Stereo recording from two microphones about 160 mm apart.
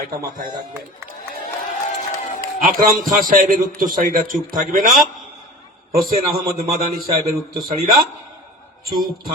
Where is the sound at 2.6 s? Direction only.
60° right (ahead or behind).